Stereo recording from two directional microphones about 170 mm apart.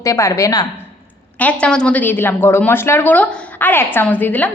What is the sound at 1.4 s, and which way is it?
A woman's voice, 5° left (ahead or behind).